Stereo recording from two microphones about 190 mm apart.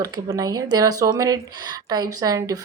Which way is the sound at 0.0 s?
20° right (ahead or behind).